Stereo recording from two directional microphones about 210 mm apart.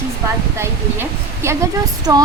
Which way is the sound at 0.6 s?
10° right (ahead or behind).